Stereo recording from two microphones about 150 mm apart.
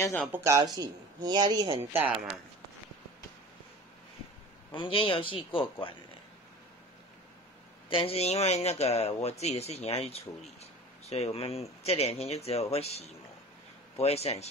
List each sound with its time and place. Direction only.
0.0 s speech: 10° left (ahead or behind)
0.3 s speech: 20° right (ahead or behind)
4.7 s a man's voice: 35° left (ahead or behind)
7.9 s speech: 40° left (ahead or behind)